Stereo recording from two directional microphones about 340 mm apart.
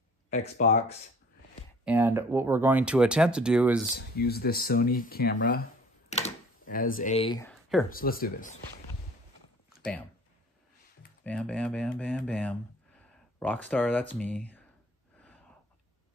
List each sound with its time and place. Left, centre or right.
0.3 s speech: left
1.9 s speech: centre
4.2 s speech: left; by 7.8 s centre
7.9 s speech: left
11.2 s speech: centre